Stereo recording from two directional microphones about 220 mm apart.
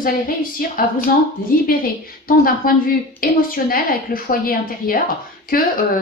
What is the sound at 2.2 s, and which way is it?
A woman's voice, 40° left (ahead or behind).